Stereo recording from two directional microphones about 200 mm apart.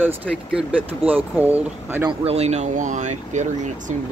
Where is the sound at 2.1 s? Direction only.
30° right (ahead or behind).